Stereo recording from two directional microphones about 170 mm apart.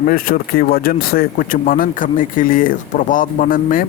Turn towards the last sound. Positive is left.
turn(degrees=55)  # may be behind; listen again after turning